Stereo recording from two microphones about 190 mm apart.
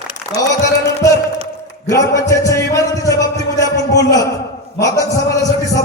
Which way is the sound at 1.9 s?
15° left (ahead or behind).